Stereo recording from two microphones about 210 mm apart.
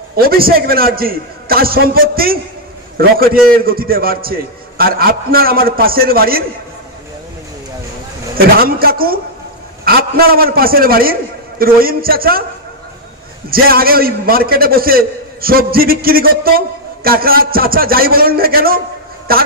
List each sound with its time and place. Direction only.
0.1 s a man's voice: 45° right (ahead or behind)
8.4 s a man's voice: 45° right (ahead or behind)
13.5 s a man's voice: 45° right (ahead or behind)